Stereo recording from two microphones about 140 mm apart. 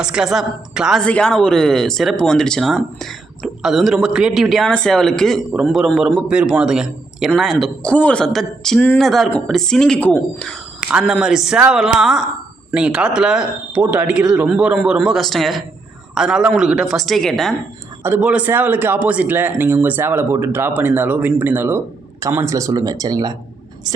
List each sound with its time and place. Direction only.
0.0 s speech: 5° right (ahead or behind)
1.0 s speech: 5° left (ahead or behind)
18.0 s a man's voice: 10° right (ahead or behind); by 23.3 s 25° right (ahead or behind)